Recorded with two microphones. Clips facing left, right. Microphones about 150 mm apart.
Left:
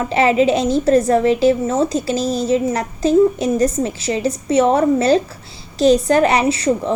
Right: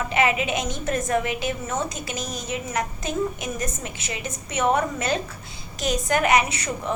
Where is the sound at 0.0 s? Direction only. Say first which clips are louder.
Left 8 dB; 35° left (ahead or behind).